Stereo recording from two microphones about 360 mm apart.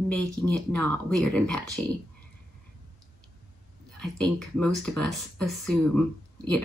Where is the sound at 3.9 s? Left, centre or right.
Centre.